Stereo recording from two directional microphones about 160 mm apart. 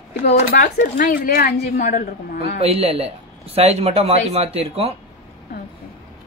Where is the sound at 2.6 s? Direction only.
40° right (ahead or behind).